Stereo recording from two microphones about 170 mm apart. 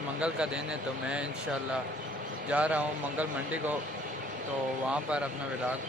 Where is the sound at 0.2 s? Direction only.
5° right (ahead or behind).